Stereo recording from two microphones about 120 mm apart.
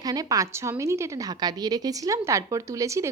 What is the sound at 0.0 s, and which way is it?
A woman's voice, 30° right (ahead or behind).